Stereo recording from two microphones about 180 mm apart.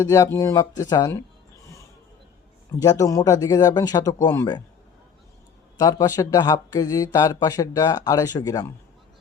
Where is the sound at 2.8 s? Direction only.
20° left (ahead or behind).